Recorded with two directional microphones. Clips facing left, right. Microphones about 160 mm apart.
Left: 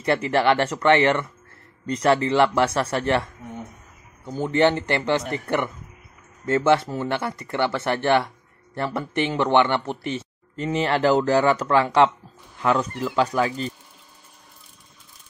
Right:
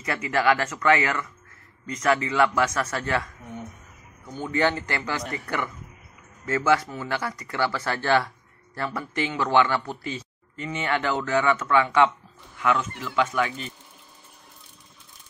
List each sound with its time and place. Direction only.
0.0 s speech: 30° left (ahead or behind)
4.3 s speech: 30° left (ahead or behind)